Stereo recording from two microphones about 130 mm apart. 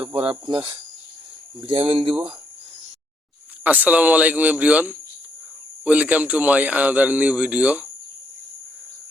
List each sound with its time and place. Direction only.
0.1 s speech: 45° right (ahead or behind)
3.6 s a man's voice: 10° right (ahead or behind)